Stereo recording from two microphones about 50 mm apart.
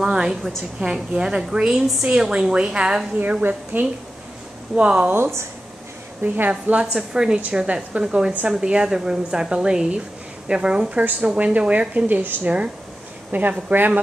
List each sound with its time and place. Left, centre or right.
0.0 s a woman's voice: centre
3.2 s a woman's voice: right
4.7 s a woman's voice: right
6.2 s a woman's voice: right
6.5 s a woman's voice: centre
12.1 s a woman's voice: right